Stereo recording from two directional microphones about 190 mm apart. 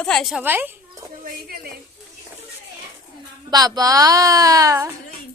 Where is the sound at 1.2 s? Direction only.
50° right (ahead or behind).